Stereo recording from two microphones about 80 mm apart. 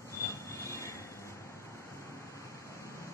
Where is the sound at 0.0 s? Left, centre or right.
Left.